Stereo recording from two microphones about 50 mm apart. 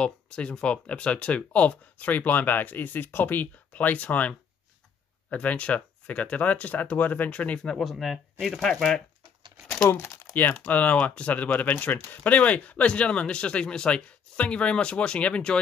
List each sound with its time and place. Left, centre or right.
0.0 s speech: left
5.3 s speech: left
7.5 s speech: centre
7.8 s speech: centre
9.8 s speech: left
10.7 s speech: left